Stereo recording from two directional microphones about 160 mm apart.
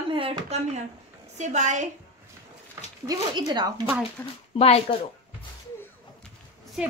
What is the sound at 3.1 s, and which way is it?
Speech, 25° right (ahead or behind).